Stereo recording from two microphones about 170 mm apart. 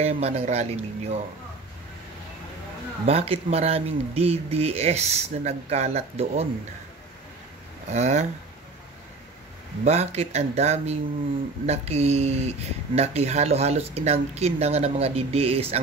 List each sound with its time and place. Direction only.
0.0 s speech: 40° right (ahead or behind)
3.1 s speech: 35° right (ahead or behind)
7.9 s speech: 40° right (ahead or behind)
9.8 s speech: 40° right (ahead or behind)